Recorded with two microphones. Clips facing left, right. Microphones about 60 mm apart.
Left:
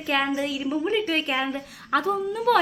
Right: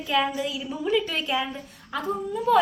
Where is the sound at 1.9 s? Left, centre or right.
Left.